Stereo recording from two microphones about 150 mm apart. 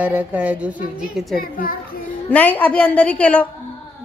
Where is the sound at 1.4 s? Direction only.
75° left (ahead or behind).